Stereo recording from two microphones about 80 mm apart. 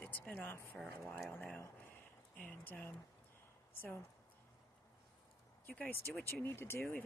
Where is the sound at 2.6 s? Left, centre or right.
Left.